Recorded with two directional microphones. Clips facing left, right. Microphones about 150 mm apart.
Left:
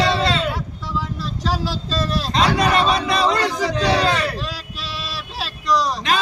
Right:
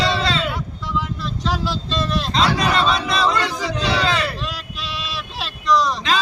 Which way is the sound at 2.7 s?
50° left (ahead or behind).